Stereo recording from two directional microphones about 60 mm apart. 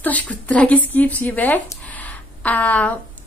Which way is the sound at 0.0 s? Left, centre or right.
Left.